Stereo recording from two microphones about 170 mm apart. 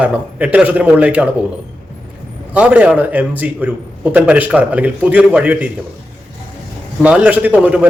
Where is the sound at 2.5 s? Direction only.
10° right (ahead or behind).